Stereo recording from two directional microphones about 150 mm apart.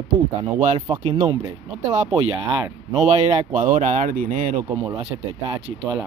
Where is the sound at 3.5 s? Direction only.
55° right (ahead or behind).